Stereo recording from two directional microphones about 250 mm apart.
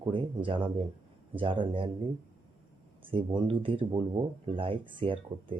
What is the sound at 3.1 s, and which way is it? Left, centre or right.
Speech, centre.